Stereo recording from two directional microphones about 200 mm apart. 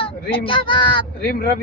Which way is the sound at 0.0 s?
25° left (ahead or behind).